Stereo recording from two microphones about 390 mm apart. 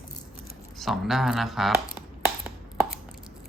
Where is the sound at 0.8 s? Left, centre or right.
Centre.